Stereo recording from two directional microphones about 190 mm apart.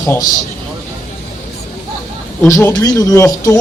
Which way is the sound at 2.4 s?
15° left (ahead or behind).